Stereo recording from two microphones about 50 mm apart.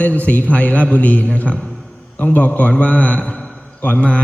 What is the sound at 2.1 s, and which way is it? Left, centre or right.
A man's voice, left.